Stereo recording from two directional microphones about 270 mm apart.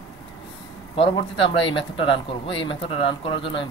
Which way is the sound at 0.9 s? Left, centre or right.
Centre.